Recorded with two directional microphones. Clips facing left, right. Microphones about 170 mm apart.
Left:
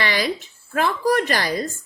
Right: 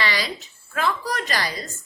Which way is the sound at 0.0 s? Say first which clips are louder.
Left 3 dB; 50° left (ahead or behind).